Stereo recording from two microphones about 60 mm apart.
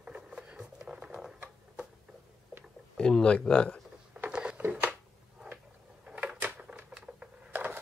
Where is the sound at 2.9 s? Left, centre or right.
Centre.